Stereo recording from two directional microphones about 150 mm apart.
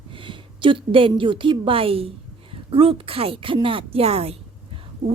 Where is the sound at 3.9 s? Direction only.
40° right (ahead or behind).